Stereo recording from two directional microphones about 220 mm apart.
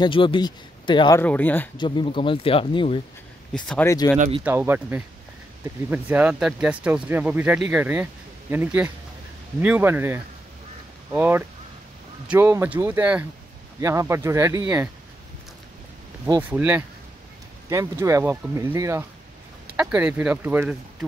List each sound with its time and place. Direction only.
0.0 s speech: 20° left (ahead or behind)
1.2 s speech: 5° left (ahead or behind)
1.8 s speech: 25° left (ahead or behind)
3.5 s speech: 5° left (ahead or behind)
4.5 s speech: 10° right (ahead or behind)
16.3 s speech: 10° right (ahead or behind)